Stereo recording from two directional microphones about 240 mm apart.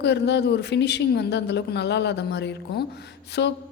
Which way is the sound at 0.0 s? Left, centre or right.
Left.